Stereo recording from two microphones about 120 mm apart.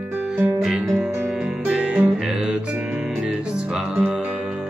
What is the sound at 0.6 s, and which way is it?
Music, centre (ahead or behind).